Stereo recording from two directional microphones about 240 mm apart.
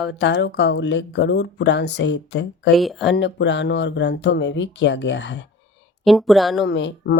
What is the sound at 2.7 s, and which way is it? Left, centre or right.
Speech, centre.